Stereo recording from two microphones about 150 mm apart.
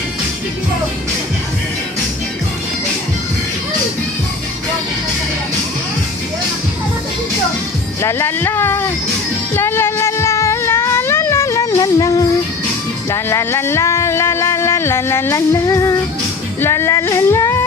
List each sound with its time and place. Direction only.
8.0 s speech: 15° left (ahead or behind)
9.6 s a sound: 15° left (ahead or behind)
13.1 s speech: 15° left (ahead or behind)
16.6 s music: 15° left (ahead or behind)